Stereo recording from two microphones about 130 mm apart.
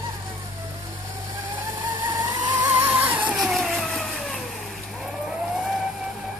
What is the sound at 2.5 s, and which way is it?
Vehicle, 15° right (ahead or behind).